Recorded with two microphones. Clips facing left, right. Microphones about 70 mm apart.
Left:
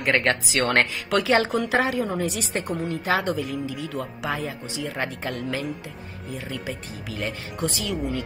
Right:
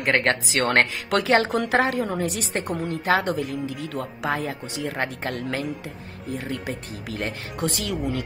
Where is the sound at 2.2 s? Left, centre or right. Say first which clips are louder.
Even; right.